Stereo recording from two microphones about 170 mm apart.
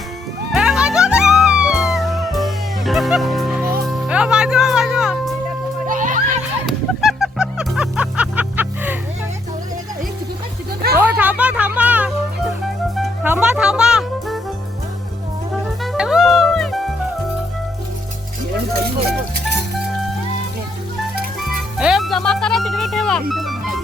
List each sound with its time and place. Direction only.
0.5 s music: 5° right (ahead or behind)
5.9 s music: 50° right (ahead or behind)
7.0 s music: centre (ahead or behind)
11.0 s music: 10° right (ahead or behind)
13.2 s music: 10° right (ahead or behind)
15.8 s music: centre (ahead or behind)
21.4 s music: centre (ahead or behind)